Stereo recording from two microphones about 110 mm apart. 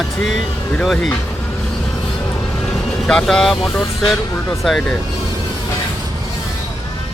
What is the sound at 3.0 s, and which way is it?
Speech, 5° left (ahead or behind).